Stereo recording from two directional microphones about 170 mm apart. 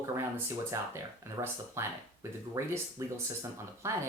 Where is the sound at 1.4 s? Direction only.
15° right (ahead or behind).